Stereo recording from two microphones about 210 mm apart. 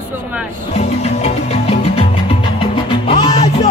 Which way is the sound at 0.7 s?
30° left (ahead or behind).